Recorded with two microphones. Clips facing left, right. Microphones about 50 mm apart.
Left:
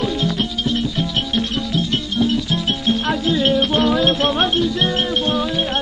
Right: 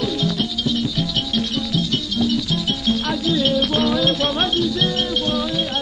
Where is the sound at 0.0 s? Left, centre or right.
Left.